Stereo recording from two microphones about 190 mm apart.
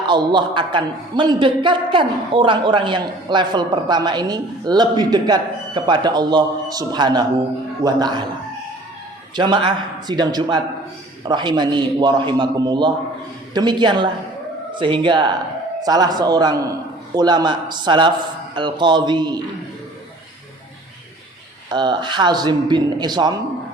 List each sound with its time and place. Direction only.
0.1 s a man's voice: 25° right (ahead or behind)
9.3 s a man's voice: 25° right (ahead or behind)
21.7 s a man's voice: 20° right (ahead or behind)